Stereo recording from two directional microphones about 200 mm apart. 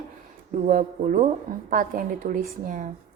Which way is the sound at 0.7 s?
40° right (ahead or behind).